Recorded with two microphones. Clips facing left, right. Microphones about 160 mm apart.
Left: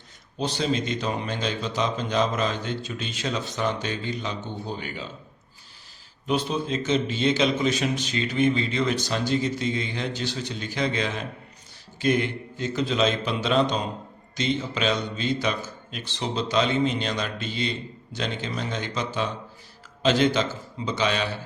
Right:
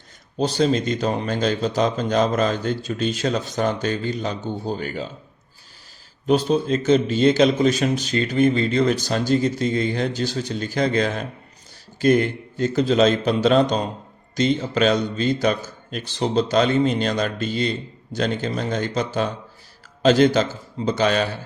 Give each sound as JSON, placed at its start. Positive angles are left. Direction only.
{"t": 0.3, "sound": "a man's voice", "side_deg": -40}
{"t": 6.2, "sound": "a man's voice", "side_deg": -40}